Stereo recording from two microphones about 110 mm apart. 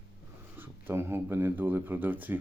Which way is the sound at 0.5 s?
20° right (ahead or behind).